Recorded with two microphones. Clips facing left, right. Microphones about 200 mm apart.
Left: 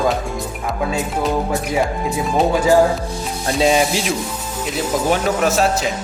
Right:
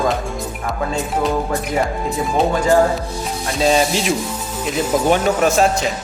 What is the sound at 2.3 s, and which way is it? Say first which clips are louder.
Music: left 1 dB; 5° left (ahead or behind).